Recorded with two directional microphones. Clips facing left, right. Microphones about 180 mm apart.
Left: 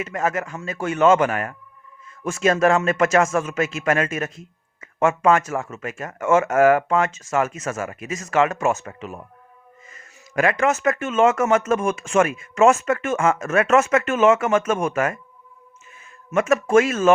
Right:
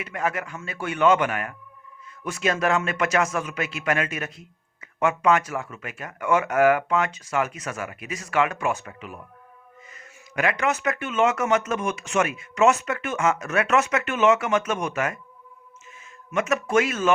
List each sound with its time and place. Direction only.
0.0 s a man's voice: 40° left (ahead or behind)
16.3 s a man's voice: 50° left (ahead or behind)